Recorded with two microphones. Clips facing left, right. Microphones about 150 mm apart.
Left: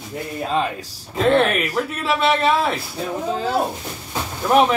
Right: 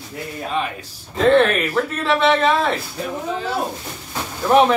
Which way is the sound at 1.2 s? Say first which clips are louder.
Right 2 dB; 5° left (ahead or behind).